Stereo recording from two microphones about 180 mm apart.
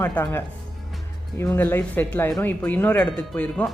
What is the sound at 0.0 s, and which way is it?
Speech, 10° left (ahead or behind).